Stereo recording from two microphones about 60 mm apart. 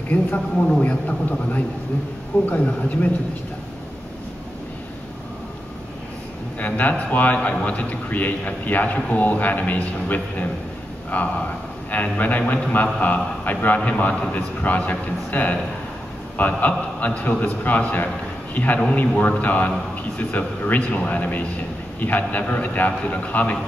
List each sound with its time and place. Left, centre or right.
0.6 s a man's voice: centre
2.4 s a man's voice: left
6.6 s a man's voice: left